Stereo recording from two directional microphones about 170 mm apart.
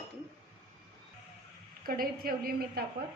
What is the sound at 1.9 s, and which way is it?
Speech, 60° right (ahead or behind).